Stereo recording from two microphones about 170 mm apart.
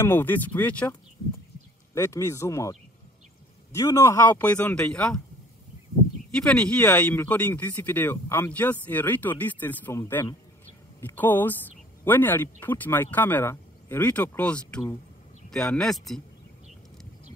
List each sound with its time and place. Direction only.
0.0 s speech: 10° left (ahead or behind)
2.0 s speech: 15° left (ahead or behind)
3.7 s speech: 20° left (ahead or behind)
6.3 s speech: 5° left (ahead or behind)